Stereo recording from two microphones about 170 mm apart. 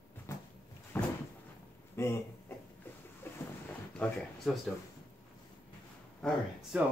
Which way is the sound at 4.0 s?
5° left (ahead or behind).